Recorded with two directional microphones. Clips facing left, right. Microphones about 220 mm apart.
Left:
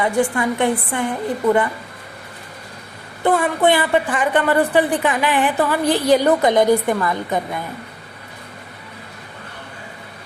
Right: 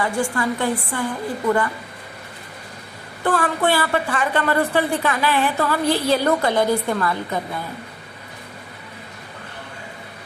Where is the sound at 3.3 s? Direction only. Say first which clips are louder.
Left 4 dB; 20° left (ahead or behind).